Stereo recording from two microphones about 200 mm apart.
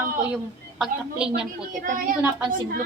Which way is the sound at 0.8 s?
5° right (ahead or behind).